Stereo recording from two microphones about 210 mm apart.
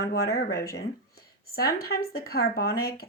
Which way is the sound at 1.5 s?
45° left (ahead or behind).